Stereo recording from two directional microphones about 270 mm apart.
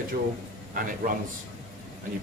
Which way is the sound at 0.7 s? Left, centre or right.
Right.